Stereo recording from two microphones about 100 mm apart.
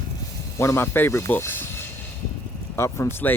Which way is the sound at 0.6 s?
25° left (ahead or behind).